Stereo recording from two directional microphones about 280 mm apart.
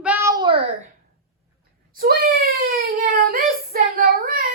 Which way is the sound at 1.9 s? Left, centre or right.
Right.